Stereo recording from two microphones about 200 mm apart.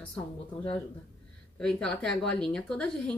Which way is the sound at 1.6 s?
5° left (ahead or behind).